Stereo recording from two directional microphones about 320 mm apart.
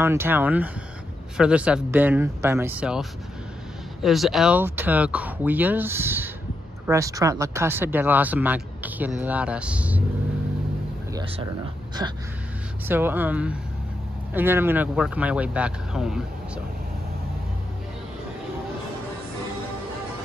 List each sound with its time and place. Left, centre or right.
0.0 s speech: centre
12.0 s speech: centre